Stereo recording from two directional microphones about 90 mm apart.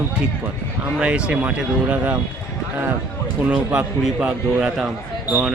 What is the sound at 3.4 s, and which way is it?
Speech, 15° right (ahead or behind).